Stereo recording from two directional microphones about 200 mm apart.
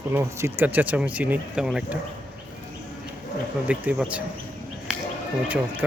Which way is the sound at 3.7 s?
5° right (ahead or behind).